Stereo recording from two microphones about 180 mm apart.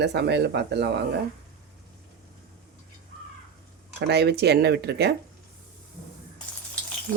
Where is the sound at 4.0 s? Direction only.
65° right (ahead or behind).